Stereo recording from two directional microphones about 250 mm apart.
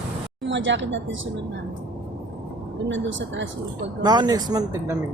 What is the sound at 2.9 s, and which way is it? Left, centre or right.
Speech, right.